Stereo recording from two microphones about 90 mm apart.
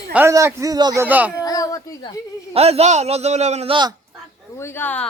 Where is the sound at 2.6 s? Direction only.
90° right.